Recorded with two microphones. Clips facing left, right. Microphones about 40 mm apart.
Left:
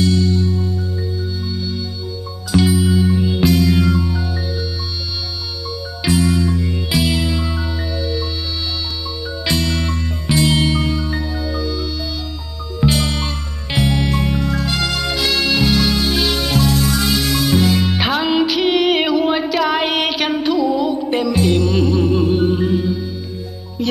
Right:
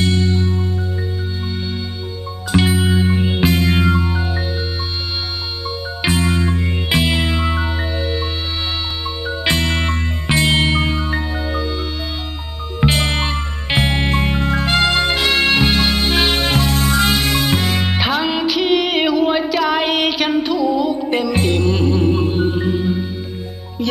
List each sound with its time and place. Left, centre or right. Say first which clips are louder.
0.0 s music: left 1 dB; right
2.5 s music: left 1 dB; right
6.0 s music: left 2 dB; right
12.8 s music: right 1 dB; right
17.9 s music: left 2 dB; centre
21.5 s music: left 1 dB; right
21.7 s music: left 1 dB; centre